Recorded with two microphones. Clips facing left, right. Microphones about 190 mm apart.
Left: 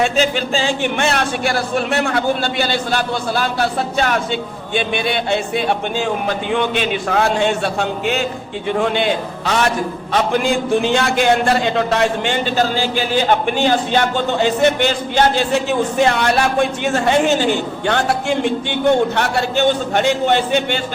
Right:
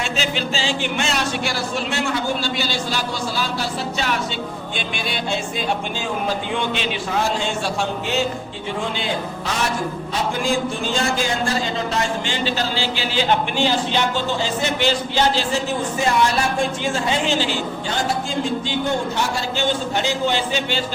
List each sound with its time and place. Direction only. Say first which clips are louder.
0.0 s a man's voice: left 7 dB; 50° left (ahead or behind)